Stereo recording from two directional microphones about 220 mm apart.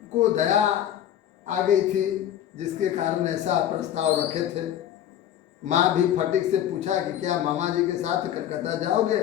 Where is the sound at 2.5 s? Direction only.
30° right (ahead or behind).